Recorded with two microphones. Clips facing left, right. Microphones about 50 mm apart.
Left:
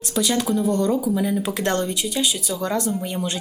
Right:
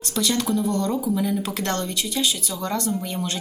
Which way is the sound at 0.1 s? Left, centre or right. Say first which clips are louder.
Left 2 dB; centre.